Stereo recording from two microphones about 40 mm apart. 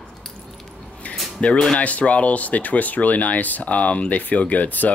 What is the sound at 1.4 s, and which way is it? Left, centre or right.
Speech, left.